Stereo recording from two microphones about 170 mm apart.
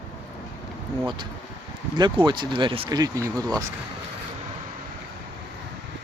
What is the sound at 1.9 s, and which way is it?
Speech, 25° right (ahead or behind).